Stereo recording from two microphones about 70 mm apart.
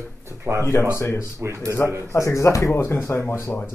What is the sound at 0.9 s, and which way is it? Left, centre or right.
Speech, left.